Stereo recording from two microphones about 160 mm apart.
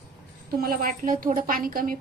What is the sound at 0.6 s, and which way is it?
A woman's voice, 65° right (ahead or behind).